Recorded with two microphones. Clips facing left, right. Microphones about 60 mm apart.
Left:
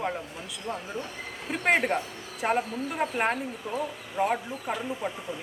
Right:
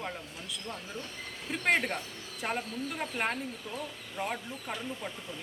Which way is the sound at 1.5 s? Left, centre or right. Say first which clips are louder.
Left 4 dB; centre.